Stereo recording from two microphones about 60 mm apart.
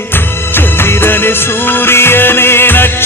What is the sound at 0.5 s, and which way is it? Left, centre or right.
Music of bollywood, left.